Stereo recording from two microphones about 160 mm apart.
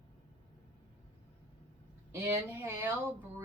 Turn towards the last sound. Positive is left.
turn(degrees=-15)  # may be behind; listen again after turning